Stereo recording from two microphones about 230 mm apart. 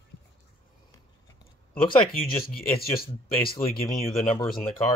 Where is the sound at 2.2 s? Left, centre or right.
Left.